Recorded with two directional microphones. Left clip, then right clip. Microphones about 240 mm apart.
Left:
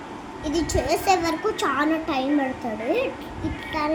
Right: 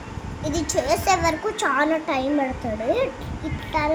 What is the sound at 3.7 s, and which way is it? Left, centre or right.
Child singing, centre.